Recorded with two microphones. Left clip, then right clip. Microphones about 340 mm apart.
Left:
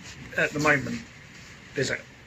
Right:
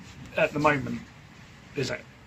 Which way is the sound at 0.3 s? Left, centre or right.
Centre.